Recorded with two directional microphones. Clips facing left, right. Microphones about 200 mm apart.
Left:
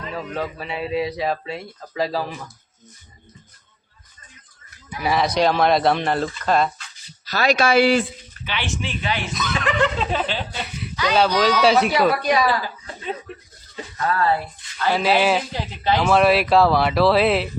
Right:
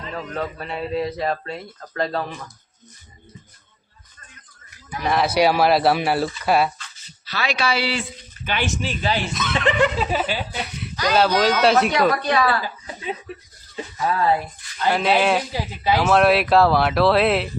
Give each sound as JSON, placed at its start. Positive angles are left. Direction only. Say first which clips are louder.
{"t": 0.1, "sound": "speech", "louder": "even", "side_deg": 5}
{"t": 5.0, "sound": "speech", "louder": "right 1 dB", "side_deg": 0}
{"t": 7.3, "sound": "speech", "louder": "left 5 dB", "side_deg": 40}
{"t": 8.4, "sound": "speech", "louder": "right 3 dB", "side_deg": -45}
{"t": 9.7, "sound": "speech", "louder": "right 1 dB", "side_deg": -10}
{"t": 13.7, "sound": "speech", "louder": "even", "side_deg": -15}
{"t": 14.9, "sound": "speech", "louder": "left 1 dB", "side_deg": 0}
{"t": 15.5, "sound": "speech", "louder": "even", "side_deg": -10}